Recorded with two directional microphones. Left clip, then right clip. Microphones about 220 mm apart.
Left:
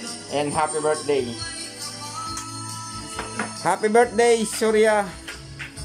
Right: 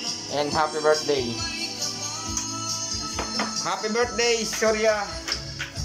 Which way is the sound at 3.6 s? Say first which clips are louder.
Left 9 dB; 30° left (ahead or behind).